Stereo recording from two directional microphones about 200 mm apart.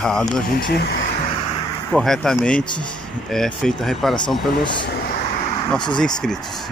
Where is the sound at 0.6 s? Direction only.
55° left (ahead or behind).